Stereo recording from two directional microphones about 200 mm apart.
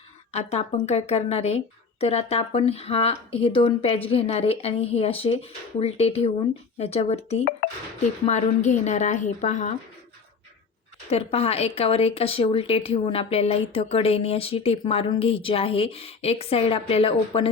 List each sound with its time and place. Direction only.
0.3 s a woman's voice: 30° left (ahead or behind)
11.1 s speech: 30° left (ahead or behind)